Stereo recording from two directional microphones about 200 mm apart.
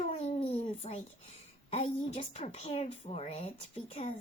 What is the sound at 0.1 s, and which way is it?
Babbling, 30° left (ahead or behind).